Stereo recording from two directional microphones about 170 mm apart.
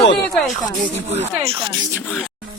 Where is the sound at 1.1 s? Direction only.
35° right (ahead or behind).